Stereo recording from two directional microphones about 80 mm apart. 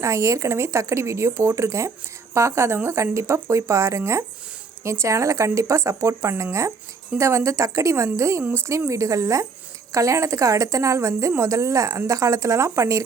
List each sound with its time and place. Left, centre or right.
0.0 s a woman's voice: right